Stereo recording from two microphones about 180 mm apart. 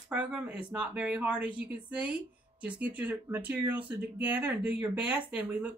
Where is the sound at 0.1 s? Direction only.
5° right (ahead or behind).